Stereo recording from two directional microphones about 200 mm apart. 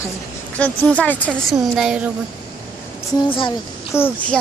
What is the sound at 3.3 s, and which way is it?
Speech, 25° left (ahead or behind).